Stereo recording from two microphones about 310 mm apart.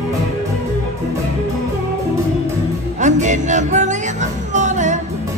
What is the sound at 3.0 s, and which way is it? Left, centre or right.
Music, right.